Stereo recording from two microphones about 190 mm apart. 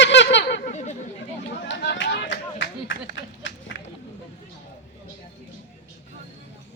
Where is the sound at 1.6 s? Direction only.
70° left (ahead or behind).